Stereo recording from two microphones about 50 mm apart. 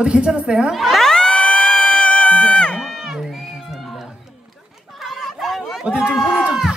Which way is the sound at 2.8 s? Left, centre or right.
Centre.